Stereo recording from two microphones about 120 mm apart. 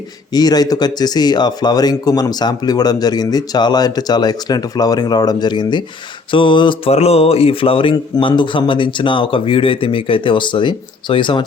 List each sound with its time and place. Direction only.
0.3 s speech: 35° left (ahead or behind)
6.9 s speech: 60° left (ahead or behind)